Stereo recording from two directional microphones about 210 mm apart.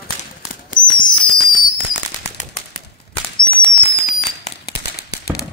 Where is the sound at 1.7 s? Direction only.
35° left (ahead or behind).